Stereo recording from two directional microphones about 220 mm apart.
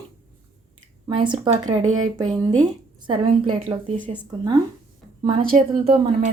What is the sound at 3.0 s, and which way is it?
Speech, 20° right (ahead or behind).